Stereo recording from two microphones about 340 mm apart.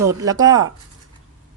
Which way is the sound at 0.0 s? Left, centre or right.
Centre.